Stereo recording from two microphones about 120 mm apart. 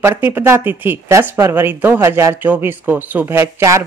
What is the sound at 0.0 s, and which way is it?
Speech, 15° right (ahead or behind).